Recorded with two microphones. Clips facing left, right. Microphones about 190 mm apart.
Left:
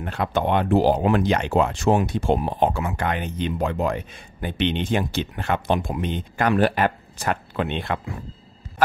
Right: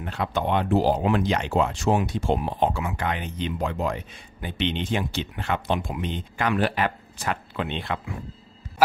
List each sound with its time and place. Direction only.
0.0 s speech: 50° left (ahead or behind)